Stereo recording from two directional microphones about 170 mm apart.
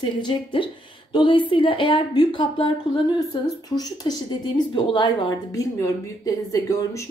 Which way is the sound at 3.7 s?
25° left (ahead or behind).